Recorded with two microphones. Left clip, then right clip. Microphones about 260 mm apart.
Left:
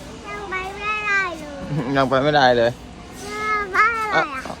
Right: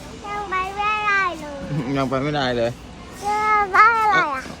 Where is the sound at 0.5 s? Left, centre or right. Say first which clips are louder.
Right 3 dB; centre.